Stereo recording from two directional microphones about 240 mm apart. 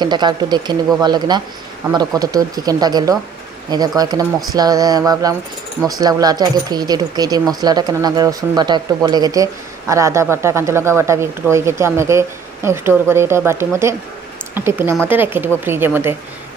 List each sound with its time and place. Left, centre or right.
0.0 s speech: centre